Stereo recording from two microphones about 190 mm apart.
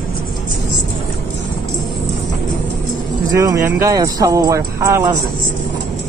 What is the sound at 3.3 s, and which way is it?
Speech, 15° right (ahead or behind).